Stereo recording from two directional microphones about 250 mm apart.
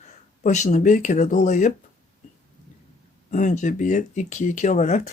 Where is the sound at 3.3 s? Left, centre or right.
Left.